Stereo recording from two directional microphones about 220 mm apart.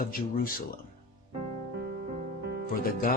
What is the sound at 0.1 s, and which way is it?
Speech, 40° left (ahead or behind).